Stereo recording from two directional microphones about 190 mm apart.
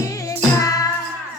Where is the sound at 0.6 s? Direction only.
20° left (ahead or behind).